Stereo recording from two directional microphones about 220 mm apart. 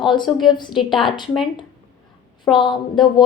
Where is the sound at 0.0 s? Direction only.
20° left (ahead or behind).